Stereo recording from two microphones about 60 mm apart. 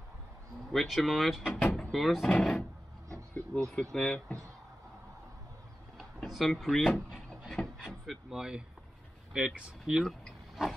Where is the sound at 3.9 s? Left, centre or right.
Centre.